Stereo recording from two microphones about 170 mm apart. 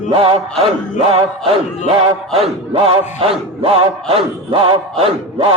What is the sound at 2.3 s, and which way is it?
Chant, 35° right (ahead or behind).